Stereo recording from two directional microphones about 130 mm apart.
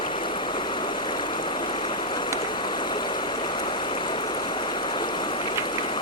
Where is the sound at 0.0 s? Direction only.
40° left (ahead or behind).